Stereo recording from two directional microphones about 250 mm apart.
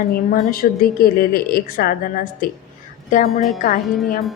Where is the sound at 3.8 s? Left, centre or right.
Centre.